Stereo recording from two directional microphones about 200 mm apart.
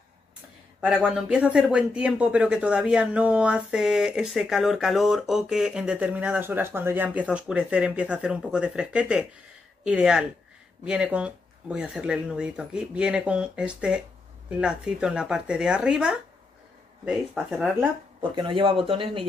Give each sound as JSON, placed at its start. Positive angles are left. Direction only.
{"t": 0.7, "sound": "speech", "side_deg": -5}
{"t": 18.2, "sound": "speech", "side_deg": -25}